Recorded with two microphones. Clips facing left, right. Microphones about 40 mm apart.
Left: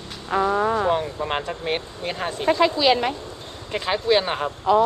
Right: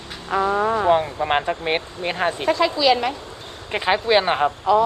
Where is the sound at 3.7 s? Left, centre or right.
Right.